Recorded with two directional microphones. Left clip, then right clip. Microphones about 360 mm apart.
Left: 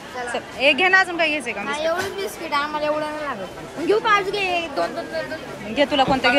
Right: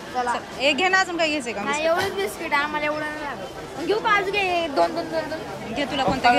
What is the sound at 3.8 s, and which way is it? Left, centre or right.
Speech, centre.